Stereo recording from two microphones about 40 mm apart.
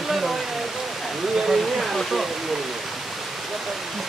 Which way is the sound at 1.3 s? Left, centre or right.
Centre.